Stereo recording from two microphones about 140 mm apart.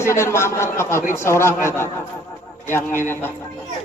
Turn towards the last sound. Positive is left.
turn(degrees=15)  # may be behind; listen again after turning